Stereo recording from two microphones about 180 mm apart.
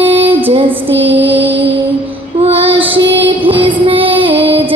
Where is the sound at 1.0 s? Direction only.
10° right (ahead or behind).